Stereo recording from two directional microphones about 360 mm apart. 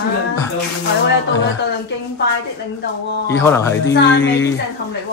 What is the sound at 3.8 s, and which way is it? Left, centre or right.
Speech, left.